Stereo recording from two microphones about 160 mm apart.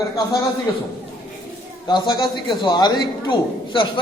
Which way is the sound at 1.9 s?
25° left (ahead or behind).